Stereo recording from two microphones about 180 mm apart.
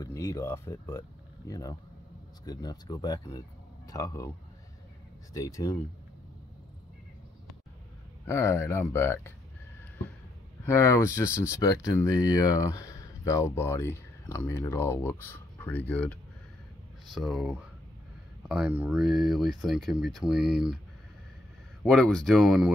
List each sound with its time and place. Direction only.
0.0 s speech: 20° left (ahead or behind)
5.3 s speech: 20° left (ahead or behind)
8.3 s speech: 15° left (ahead or behind)
10.6 s speech: 15° left (ahead or behind); by 20.8 s 5° right (ahead or behind)
21.8 s speech: 5° left (ahead or behind)